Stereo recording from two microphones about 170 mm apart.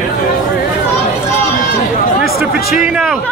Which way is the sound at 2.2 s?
Centre (ahead or behind).